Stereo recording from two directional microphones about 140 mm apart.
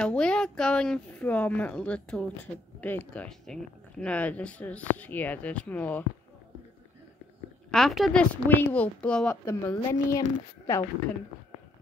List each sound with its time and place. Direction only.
0.0 s speech: 5° left (ahead or behind)
7.7 s speech: centre (ahead or behind)
9.3 s speech: 25° left (ahead or behind)